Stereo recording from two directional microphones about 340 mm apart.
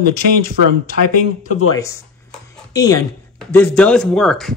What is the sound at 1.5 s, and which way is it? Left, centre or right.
Speech, left.